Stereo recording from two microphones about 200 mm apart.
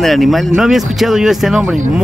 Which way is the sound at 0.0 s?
Centre (ahead or behind).